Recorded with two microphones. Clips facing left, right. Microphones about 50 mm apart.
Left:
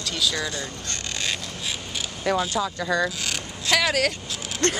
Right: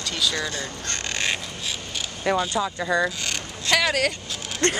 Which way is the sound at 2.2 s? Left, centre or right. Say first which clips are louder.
Right 1 dB; centre.